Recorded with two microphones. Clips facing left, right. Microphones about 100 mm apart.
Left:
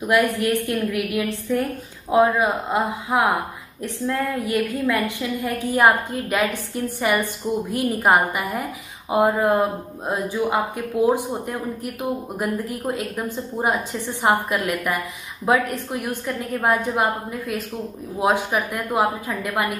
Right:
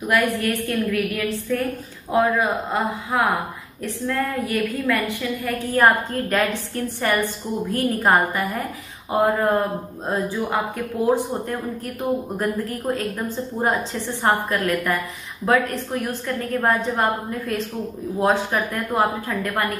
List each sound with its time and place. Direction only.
0.1 s speech: 15° left (ahead or behind)